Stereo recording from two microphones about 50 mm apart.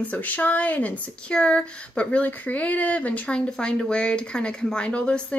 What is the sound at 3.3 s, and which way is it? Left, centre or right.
Speech, centre.